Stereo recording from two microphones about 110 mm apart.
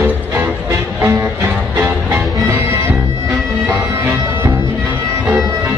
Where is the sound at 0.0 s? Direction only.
20° right (ahead or behind).